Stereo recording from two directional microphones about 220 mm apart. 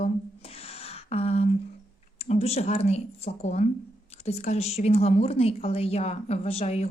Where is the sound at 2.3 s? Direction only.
30° left (ahead or behind).